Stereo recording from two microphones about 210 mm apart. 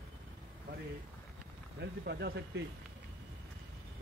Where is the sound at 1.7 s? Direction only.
50° right (ahead or behind).